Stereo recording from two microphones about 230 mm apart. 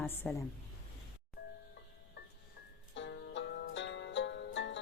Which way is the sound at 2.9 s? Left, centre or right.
Left.